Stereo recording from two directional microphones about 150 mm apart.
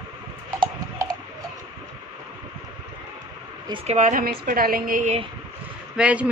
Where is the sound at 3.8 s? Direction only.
55° right (ahead or behind).